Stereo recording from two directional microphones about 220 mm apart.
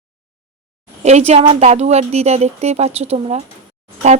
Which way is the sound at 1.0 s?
30° right (ahead or behind).